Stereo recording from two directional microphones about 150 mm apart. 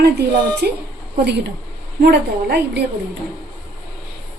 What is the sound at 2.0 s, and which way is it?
Speech, 90° right.